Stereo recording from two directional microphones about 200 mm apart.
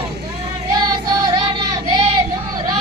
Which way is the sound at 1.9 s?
20° right (ahead or behind).